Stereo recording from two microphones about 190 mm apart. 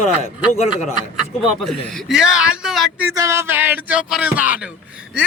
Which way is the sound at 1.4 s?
Centre (ahead or behind).